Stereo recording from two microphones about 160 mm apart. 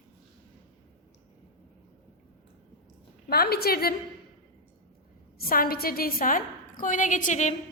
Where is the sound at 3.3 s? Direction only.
75° left (ahead or behind).